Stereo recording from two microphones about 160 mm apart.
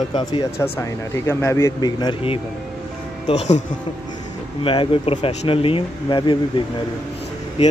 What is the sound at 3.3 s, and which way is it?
Speech, 45° left (ahead or behind).